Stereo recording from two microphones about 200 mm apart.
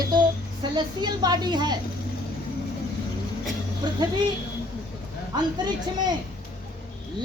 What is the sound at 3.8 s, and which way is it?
Speech, 20° right (ahead or behind).